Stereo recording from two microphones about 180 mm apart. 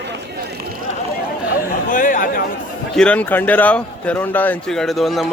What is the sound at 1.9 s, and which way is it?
Chatter, 45° left (ahead or behind).